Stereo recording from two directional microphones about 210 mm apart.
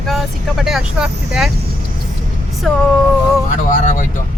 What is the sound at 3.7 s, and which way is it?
Speech, 40° left (ahead or behind).